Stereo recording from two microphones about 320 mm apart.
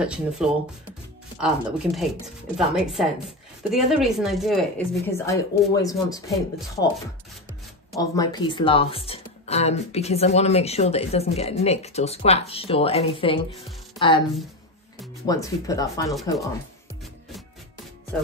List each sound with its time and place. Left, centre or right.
0.0 s a woman's voice: centre
7.9 s a woman's voice: centre
15.2 s speech: centre